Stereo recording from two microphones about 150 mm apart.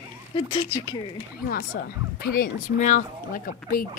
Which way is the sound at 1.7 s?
90° left.